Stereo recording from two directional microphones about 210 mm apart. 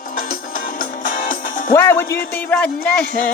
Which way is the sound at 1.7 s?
10° left (ahead or behind).